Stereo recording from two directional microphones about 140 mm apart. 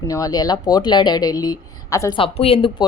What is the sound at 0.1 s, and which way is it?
Speech, 25° left (ahead or behind).